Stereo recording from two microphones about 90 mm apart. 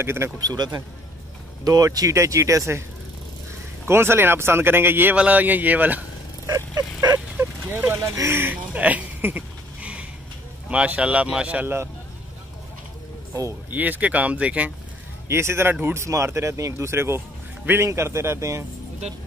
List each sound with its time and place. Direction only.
0.0 s speech: 25° right (ahead or behind)
0.4 s speech: 45° right (ahead or behind)
3.8 s speech: 25° right (ahead or behind)
6.4 s vehicle: 40° right (ahead or behind)
7.3 s vehicle: 20° right (ahead or behind)
8.0 s a sound: 35° right (ahead or behind); by 10.0 s 15° right (ahead or behind)
10.7 s speech: 10° right (ahead or behind)
13.3 s speech: 30° right (ahead or behind)
13.7 s speech: 20° right (ahead or behind)
15.2 s speech: 30° right (ahead or behind)